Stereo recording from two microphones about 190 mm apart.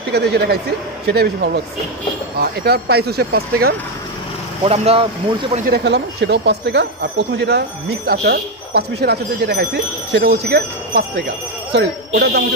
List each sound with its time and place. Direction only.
0.1 s speech: 60° right (ahead or behind)
4.6 s speech: 30° right (ahead or behind)
5.7 s speech: 65° right (ahead or behind)